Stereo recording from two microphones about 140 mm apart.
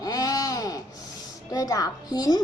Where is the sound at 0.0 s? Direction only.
25° left (ahead or behind).